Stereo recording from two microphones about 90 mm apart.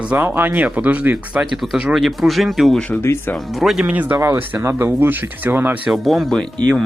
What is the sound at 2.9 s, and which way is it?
Speech, 25° left (ahead or behind).